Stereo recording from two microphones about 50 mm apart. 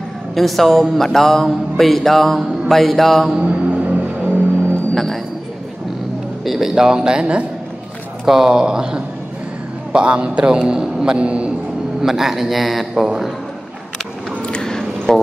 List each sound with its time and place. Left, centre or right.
0.3 s speech: centre
3.3 s music: right
4.9 s music: centre
6.4 s a man's voice: centre; by 11.5 s right
12.0 s speech: centre
14.4 s squish: centre